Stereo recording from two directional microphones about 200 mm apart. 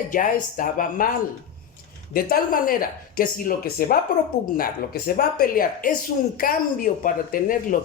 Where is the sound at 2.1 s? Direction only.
45° left (ahead or behind).